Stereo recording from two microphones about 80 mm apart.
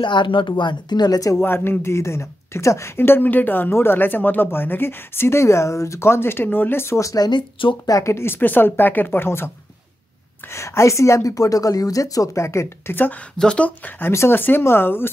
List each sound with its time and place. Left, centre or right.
0.0 s speech: left
1.4 s speech: left
7.2 s speech: left
7.8 s speech: left
10.5 s a woman's voice: left
13.4 s speech: centre; by 15.0 s left